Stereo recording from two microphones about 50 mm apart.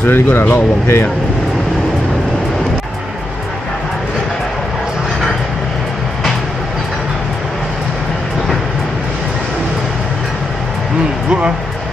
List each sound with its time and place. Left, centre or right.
0.0 s speech: left
11.2 s speech: centre